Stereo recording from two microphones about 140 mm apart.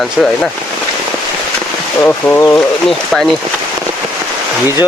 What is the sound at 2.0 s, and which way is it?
Speech, 15° left (ahead or behind).